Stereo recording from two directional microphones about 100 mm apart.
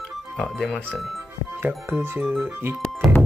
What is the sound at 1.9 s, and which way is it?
Speech, 25° right (ahead or behind).